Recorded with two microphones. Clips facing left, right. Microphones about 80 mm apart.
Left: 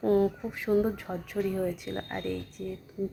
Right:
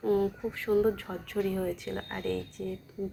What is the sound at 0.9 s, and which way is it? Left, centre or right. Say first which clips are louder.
Speech: even; centre.